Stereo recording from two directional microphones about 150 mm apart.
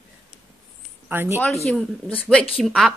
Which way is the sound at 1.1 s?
15° right (ahead or behind).